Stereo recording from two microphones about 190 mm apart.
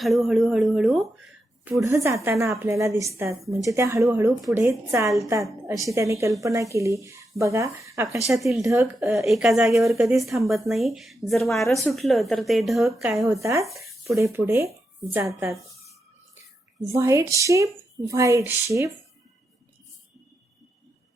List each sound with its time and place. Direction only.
0.0 s speech: centre (ahead or behind)
1.6 s a woman's voice: 15° right (ahead or behind)
8.3 s speech: centre (ahead or behind)
8.6 s a woman's voice: 10° right (ahead or behind)
9.2 s speech: centre (ahead or behind)
13.4 s a woman's voice: 15° right (ahead or behind)
15.1 s a sound: 15° right (ahead or behind)
16.9 s a woman's voice: 15° right (ahead or behind)